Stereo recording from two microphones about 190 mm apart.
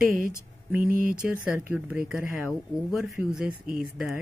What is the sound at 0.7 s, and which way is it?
Speech, 45° right (ahead or behind).